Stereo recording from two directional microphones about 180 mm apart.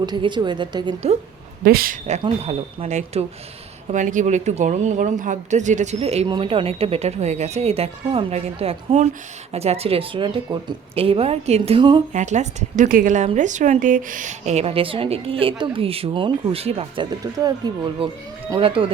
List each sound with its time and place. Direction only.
0.0 s a woman's voice: 25° right (ahead or behind)
1.6 s a woman's voice: 55° right (ahead or behind); by 12.0 s 25° right (ahead or behind)
12.1 s a woman's voice: 40° right (ahead or behind)